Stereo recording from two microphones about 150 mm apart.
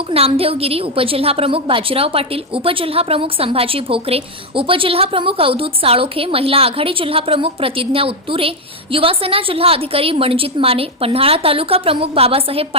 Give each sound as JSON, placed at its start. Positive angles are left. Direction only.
{"t": 0.1, "sound": "a woman's voice", "side_deg": -40}